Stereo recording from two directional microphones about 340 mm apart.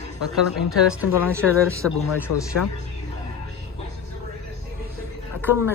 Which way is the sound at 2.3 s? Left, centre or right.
Left.